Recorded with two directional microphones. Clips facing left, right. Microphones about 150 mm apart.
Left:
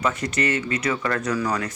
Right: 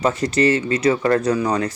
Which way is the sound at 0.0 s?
30° right (ahead or behind).